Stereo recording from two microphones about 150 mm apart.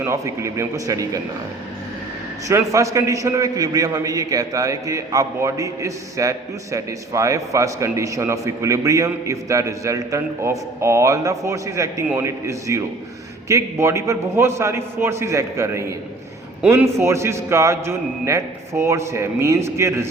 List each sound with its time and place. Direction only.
0.0 s a man's voice: 20° right (ahead or behind)
2.5 s a man's voice: 20° right (ahead or behind)